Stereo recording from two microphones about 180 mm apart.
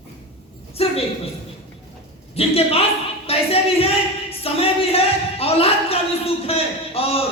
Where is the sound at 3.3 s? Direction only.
35° left (ahead or behind).